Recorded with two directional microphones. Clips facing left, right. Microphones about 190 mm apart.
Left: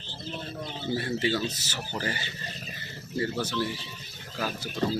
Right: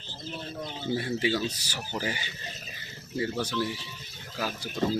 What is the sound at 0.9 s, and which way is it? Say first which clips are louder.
Speech: even; 10° right (ahead or behind).